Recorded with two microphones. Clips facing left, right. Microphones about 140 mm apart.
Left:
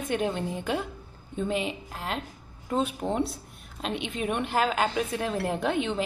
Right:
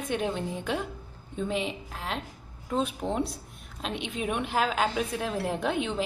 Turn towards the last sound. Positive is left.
turn(degrees=0)  # may be behind; listen again after turning